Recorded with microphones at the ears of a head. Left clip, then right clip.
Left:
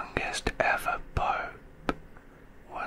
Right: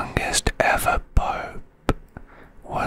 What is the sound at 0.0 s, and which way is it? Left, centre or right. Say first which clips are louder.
Whispering: right 7 dB; right.